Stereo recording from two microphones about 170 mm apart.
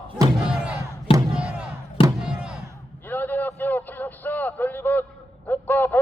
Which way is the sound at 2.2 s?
5° right (ahead or behind).